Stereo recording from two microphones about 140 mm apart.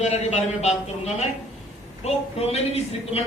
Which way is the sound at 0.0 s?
50° left (ahead or behind).